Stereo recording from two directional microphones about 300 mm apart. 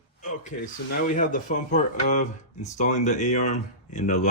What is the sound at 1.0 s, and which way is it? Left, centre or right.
Speech, left.